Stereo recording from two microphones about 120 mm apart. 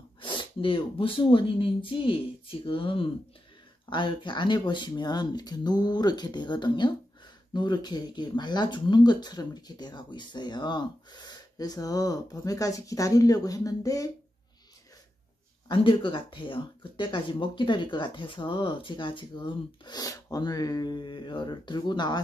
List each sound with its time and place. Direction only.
0.2 s speech: 45° left (ahead or behind); by 14.1 s 30° left (ahead or behind)
15.7 s speech: 45° left (ahead or behind)